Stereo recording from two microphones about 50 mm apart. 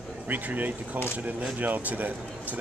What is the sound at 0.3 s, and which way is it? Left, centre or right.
Speech, right.